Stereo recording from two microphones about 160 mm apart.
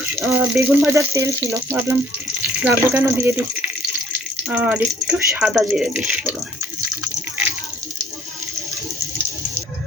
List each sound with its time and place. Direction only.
0.0 s speech: 10° right (ahead or behind)